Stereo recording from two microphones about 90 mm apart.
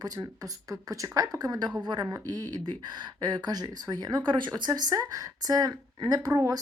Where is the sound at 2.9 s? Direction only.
55° right (ahead or behind).